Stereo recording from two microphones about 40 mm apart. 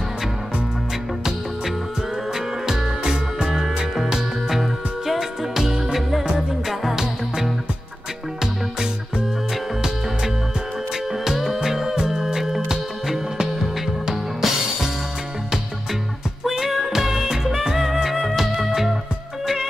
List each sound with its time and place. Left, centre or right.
2.3 s music: centre
11.2 s music: centre
14.1 s music: centre
16.4 s music: centre